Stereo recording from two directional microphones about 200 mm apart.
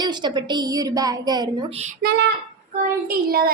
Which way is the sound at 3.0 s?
50° right (ahead or behind).